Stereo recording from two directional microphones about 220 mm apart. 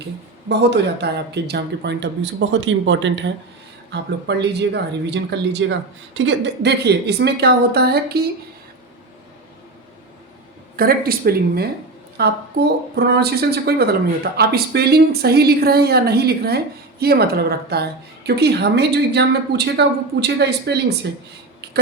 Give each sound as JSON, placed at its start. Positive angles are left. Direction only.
{"t": 0.4, "sound": "a woman's voice", "side_deg": -50}
{"t": 10.8, "sound": "a woman's voice", "side_deg": -45}